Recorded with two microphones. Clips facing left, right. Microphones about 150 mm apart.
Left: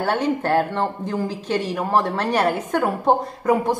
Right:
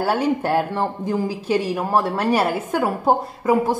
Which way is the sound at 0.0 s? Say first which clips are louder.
Right 1 dB; 10° right (ahead or behind).